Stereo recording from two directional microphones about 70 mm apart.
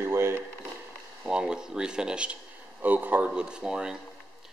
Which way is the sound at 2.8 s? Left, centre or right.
Right.